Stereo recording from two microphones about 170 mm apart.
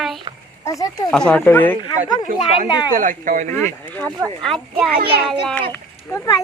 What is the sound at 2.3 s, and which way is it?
Speech, 50° right (ahead or behind).